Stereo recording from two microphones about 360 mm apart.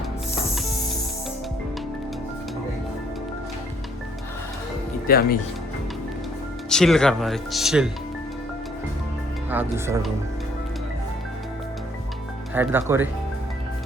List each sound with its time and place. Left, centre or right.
5.0 s speech: left
6.7 s speech: centre
9.5 s speech: centre
12.5 s speech: centre